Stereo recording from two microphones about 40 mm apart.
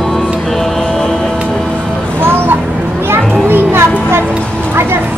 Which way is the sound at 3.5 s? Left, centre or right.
Right.